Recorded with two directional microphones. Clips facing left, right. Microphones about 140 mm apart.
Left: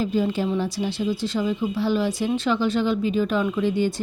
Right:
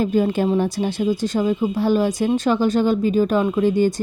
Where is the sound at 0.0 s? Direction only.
50° right (ahead or behind).